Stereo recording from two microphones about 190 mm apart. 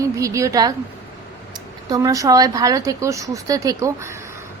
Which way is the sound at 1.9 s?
20° right (ahead or behind).